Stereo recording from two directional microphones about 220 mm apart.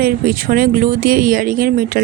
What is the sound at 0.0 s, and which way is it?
Speech, 40° right (ahead or behind).